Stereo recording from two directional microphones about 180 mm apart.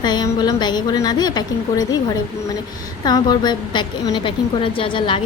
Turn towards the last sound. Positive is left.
turn(degrees=30)  # may be behind; listen again after turning